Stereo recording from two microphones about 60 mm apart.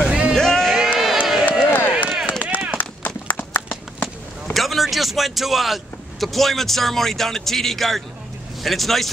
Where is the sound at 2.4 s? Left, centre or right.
Right.